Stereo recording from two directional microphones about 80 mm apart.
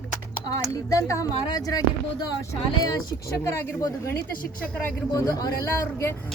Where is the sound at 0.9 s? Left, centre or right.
Left.